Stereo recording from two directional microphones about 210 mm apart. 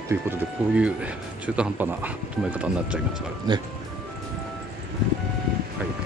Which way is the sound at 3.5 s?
20° right (ahead or behind).